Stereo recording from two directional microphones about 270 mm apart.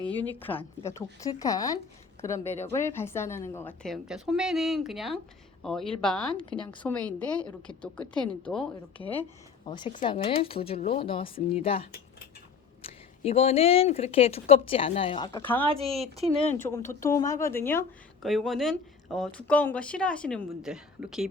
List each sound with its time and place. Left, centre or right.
0.2 s a woman's voice: centre
9.6 s speech: centre
15.6 s speech: right
16.5 s a woman's voice: centre